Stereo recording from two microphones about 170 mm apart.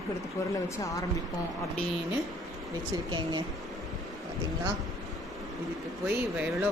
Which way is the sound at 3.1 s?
25° right (ahead or behind).